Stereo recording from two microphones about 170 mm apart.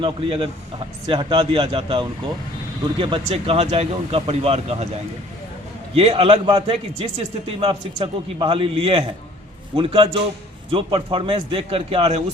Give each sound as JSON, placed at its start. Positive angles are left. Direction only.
{"t": 0.0, "sound": "a man's voice", "side_deg": -30}
{"t": 5.9, "sound": "a man's voice", "side_deg": -35}